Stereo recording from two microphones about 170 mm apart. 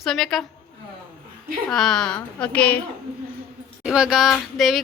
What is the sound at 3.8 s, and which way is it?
Speech, 5° right (ahead or behind).